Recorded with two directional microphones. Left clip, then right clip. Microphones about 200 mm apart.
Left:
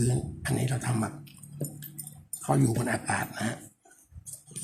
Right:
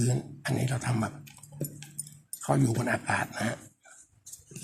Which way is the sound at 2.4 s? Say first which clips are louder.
Even; 15° right (ahead or behind).